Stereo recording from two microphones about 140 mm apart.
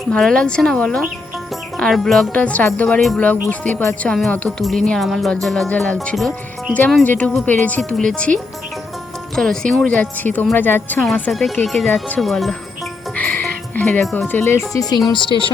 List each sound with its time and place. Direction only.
0.1 s speech: 5° left (ahead or behind)
9.3 s speech: 5° left (ahead or behind)
11.0 s speech: centre (ahead or behind)
13.1 s music: 10° left (ahead or behind)
14.0 s speech: centre (ahead or behind)
14.3 s speech: 15° left (ahead or behind)
14.7 s speech: 25° left (ahead or behind)